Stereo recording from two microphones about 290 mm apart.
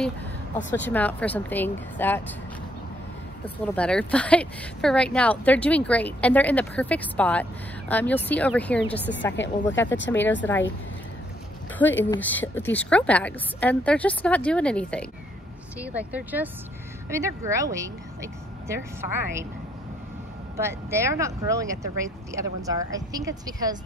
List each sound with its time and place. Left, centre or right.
0.7 s speech: centre
3.4 s speech: centre
9.4 s speech: left
10.1 s speech: centre
12.1 s speech: centre
20.5 s speech: centre